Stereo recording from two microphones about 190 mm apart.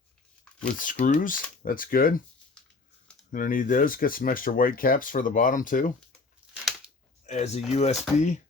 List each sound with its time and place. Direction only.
0.8 s speech: 45° left (ahead or behind)
3.3 s speech: 45° left (ahead or behind)
7.3 s speech: 35° left (ahead or behind)